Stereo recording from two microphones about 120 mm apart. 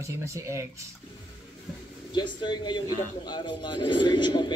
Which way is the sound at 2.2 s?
40° left (ahead or behind).